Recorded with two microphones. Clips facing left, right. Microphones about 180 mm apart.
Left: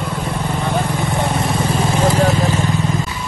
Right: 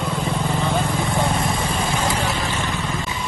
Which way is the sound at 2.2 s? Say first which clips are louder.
Left 8 dB; 40° left (ahead or behind).